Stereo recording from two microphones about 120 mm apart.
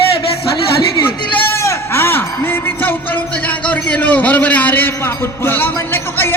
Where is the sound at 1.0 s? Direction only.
20° left (ahead or behind).